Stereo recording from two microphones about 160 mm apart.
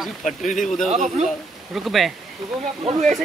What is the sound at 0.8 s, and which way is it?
Speech, 45° right (ahead or behind).